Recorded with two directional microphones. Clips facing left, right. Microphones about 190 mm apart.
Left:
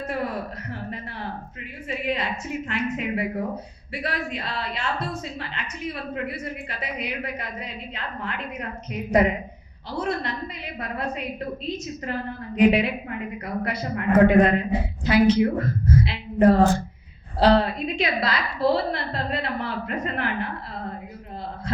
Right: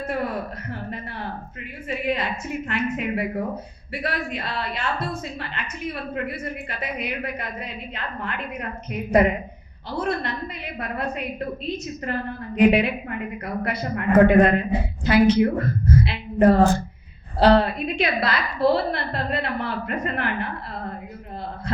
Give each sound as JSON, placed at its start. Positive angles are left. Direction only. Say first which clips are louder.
{"t": 0.0, "sound": "a woman's voice", "louder": "right 2 dB", "side_deg": -50}